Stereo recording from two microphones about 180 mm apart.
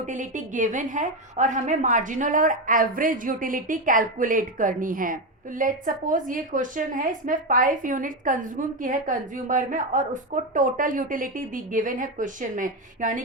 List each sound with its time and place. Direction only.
0.0 s a woman's voice: 45° right (ahead or behind)